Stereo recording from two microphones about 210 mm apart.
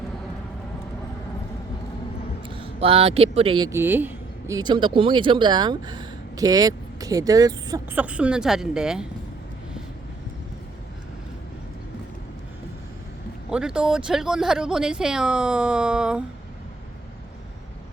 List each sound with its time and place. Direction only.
2.6 s speech: 25° right (ahead or behind)
7.9 s speech: 5° right (ahead or behind)
13.5 s speech: 5° right (ahead or behind)